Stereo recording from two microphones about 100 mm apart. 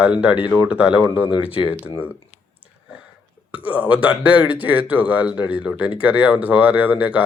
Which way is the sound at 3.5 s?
15° right (ahead or behind).